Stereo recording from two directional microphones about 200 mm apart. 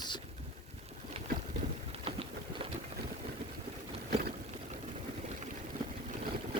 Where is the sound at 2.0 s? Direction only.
30° right (ahead or behind).